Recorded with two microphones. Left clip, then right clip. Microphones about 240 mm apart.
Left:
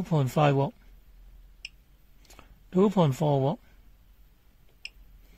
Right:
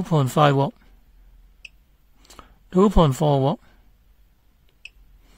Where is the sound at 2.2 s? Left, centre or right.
Right.